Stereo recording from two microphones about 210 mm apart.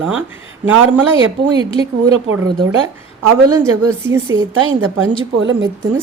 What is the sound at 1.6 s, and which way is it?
Speech, 25° left (ahead or behind).